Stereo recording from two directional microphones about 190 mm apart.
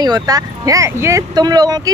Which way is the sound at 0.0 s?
20° right (ahead or behind).